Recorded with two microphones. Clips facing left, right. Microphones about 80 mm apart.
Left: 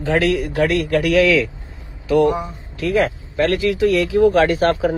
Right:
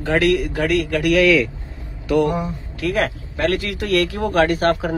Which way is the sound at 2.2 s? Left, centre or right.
Left.